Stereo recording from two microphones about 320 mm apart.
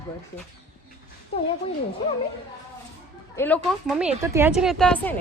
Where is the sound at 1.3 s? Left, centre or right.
Centre.